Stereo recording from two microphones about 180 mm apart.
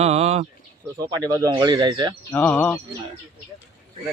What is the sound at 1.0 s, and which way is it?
Speech, 20° right (ahead or behind).